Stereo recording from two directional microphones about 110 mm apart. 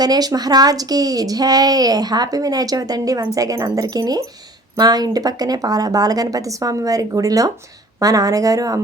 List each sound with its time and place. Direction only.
0.0 s a woman's voice: 35° right (ahead or behind)